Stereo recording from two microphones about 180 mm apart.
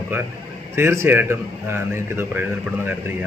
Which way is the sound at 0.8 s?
15° right (ahead or behind).